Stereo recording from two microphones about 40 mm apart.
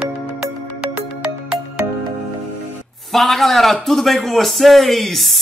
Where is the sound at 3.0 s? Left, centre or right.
Centre.